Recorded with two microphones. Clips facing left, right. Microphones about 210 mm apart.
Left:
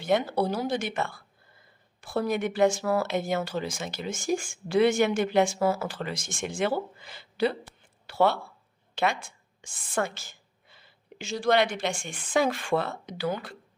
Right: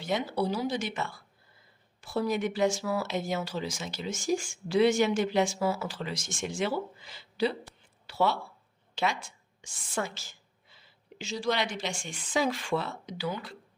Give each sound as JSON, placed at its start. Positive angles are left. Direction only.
{"t": 0.0, "sound": "speech", "side_deg": 55}
{"t": 8.0, "sound": "a sound", "side_deg": 55}
{"t": 9.0, "sound": "a woman's voice", "side_deg": 55}